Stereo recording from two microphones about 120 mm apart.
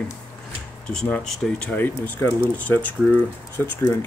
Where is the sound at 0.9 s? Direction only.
5° left (ahead or behind).